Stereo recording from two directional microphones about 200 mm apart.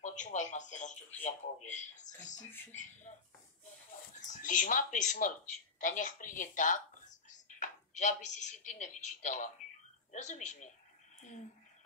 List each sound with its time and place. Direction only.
0.0 s speech: 35° left (ahead or behind)
4.3 s speech: 40° left (ahead or behind)